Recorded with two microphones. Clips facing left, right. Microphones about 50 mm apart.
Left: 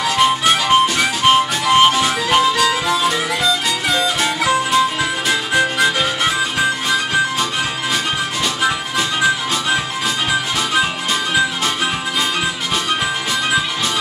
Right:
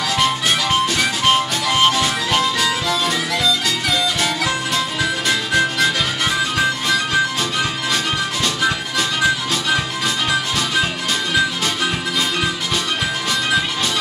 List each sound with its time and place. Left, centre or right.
0.2 s harmonica: centre
0.9 s music: centre
2.0 s harmonica: centre
3.4 s music: left
4.2 s music: centre
5.3 s harmonica: centre
8.6 s music: centre